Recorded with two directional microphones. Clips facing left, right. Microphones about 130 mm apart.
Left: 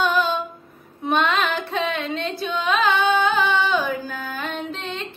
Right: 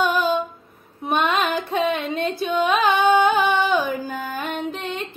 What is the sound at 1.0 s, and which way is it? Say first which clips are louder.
Female singing: left 1 dB; 10° right (ahead or behind).